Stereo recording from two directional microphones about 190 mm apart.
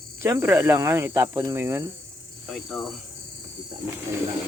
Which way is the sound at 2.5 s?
Centre (ahead or behind).